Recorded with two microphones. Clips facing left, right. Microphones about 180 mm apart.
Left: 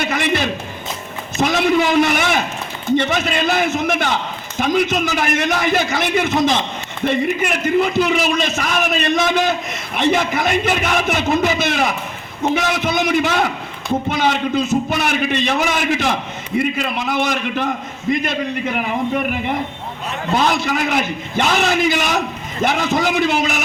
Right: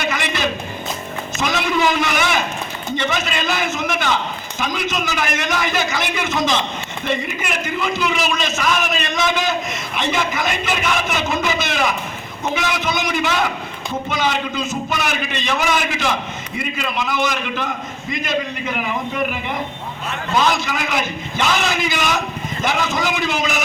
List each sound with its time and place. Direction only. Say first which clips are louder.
0.0 s music: left 3 dB; 55° left (ahead or behind)
1.4 s a man's voice: left 4 dB; 55° left (ahead or behind)
20.3 s a man's voice: left 1 dB; 55° left (ahead or behind)